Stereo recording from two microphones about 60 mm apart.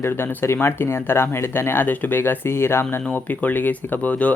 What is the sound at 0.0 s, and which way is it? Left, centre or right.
Speech, left.